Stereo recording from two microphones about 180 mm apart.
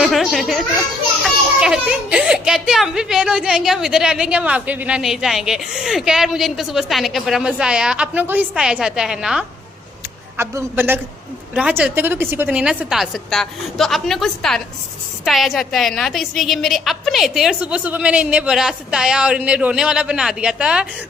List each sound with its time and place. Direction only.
0.0 s a child's voice: centre (ahead or behind)
10.3 s a man's voice: 15° right (ahead or behind)